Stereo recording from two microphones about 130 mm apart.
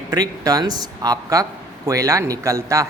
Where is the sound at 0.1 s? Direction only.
30° right (ahead or behind).